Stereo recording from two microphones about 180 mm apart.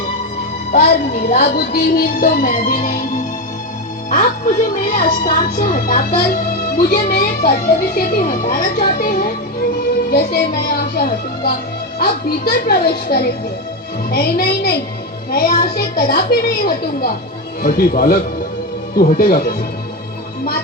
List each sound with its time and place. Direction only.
1.3 s a woman's voice: 60° left (ahead or behind)
4.1 s a woman's voice: 50° left (ahead or behind)